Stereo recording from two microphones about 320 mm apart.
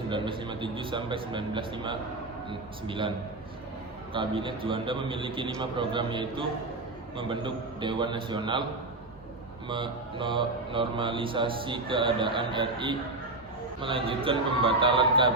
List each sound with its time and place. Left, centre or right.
0.1 s speech: centre
4.1 s speech: centre
9.6 s speech: centre